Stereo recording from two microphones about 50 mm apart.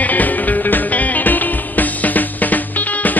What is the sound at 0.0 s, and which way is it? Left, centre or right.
Music, left.